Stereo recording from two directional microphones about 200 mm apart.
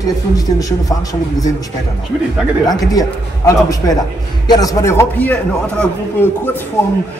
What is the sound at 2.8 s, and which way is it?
A man's voice, 15° left (ahead or behind).